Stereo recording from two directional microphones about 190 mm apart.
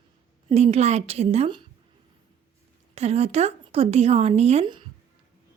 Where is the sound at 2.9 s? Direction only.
35° right (ahead or behind).